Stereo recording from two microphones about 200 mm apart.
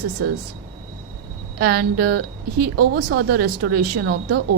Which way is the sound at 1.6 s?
50° right (ahead or behind).